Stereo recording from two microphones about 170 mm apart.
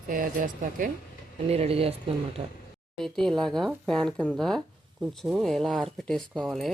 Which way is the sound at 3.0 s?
5° left (ahead or behind).